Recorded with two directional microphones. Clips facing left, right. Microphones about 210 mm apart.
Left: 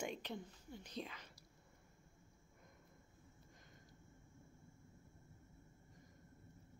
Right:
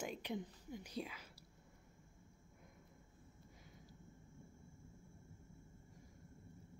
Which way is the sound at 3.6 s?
5° right (ahead or behind).